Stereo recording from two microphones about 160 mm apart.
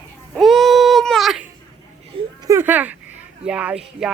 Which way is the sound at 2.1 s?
35° right (ahead or behind).